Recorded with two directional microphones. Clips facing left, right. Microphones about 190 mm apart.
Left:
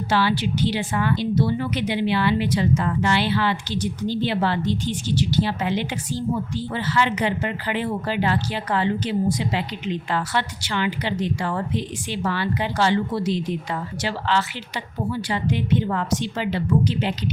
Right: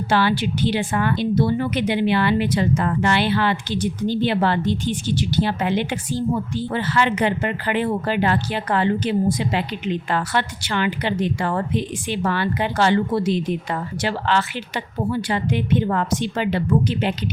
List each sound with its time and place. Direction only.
0.1 s a woman's voice: 50° right (ahead or behind)
15.1 s a woman's voice: 55° right (ahead or behind)